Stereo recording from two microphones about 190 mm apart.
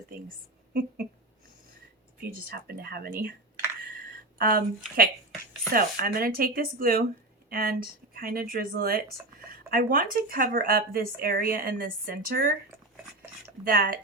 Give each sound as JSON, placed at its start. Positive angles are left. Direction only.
{"t": 0.7, "sound": "speech", "side_deg": -55}
{"t": 2.4, "sound": "speech", "side_deg": -55}
{"t": 4.4, "sound": "speech", "side_deg": -50}
{"t": 5.7, "sound": "speech", "side_deg": -50}
{"t": 13.7, "sound": "speech", "side_deg": -50}